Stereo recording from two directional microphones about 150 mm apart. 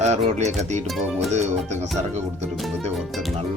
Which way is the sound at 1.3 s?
50° right (ahead or behind).